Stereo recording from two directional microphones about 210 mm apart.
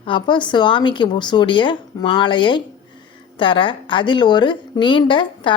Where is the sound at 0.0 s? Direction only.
20° left (ahead or behind).